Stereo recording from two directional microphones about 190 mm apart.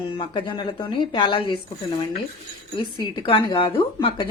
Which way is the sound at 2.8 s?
25° left (ahead or behind).